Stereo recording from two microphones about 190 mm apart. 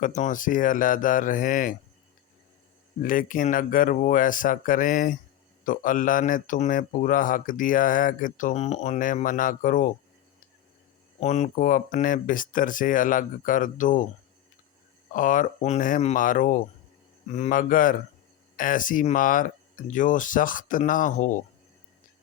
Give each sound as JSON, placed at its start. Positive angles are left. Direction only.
{"t": 0.0, "sound": "speech", "side_deg": 40}
{"t": 3.0, "sound": "speech", "side_deg": 45}
{"t": 11.2, "sound": "speech", "side_deg": 35}
{"t": 15.1, "sound": "speech", "side_deg": 45}